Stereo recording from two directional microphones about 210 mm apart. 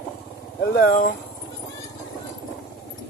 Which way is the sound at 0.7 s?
40° left (ahead or behind).